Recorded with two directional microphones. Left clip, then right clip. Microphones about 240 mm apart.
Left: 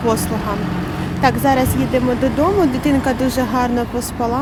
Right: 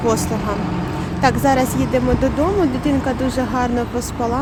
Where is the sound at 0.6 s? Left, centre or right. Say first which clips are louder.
Even; left.